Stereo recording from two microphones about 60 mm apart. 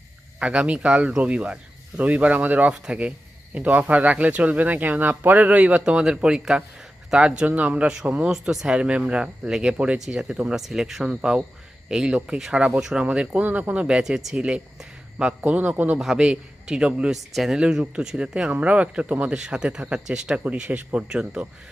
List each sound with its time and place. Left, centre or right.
0.3 s speech: centre
8.3 s speech: centre
15.4 s speech: right
16.0 s speech: centre
18.4 s speech: right